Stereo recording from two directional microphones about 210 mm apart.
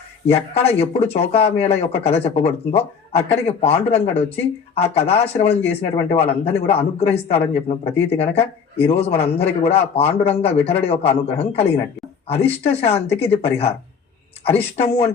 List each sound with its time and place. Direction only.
0.3 s speech: 30° left (ahead or behind)